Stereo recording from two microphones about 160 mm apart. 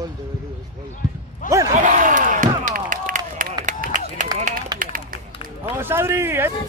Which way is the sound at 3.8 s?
55° right (ahead or behind).